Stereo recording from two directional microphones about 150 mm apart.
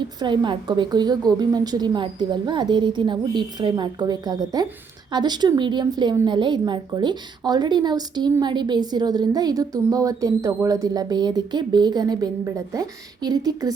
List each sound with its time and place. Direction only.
0.2 s a woman's voice: 30° right (ahead or behind)